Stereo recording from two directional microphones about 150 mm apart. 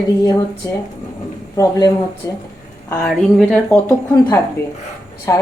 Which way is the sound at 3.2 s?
5° left (ahead or behind).